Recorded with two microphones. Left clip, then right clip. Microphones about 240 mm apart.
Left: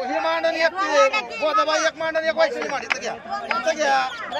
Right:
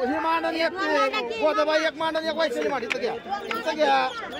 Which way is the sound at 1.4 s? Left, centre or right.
Centre.